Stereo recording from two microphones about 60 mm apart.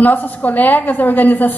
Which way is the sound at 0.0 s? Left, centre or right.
Left.